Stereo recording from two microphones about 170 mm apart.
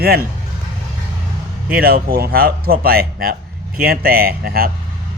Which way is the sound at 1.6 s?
60° right (ahead or behind).